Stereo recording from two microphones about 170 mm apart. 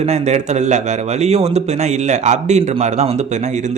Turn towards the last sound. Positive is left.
turn(degrees=-40)  # may be behind; listen again after turning